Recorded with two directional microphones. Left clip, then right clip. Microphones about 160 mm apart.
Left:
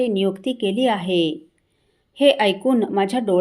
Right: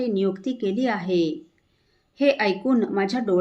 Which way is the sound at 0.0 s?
20° left (ahead or behind).